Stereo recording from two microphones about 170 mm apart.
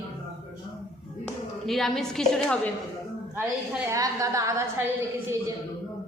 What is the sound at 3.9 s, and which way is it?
Speech, 20° right (ahead or behind).